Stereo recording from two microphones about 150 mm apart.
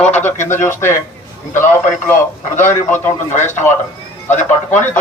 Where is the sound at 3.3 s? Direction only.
50° left (ahead or behind).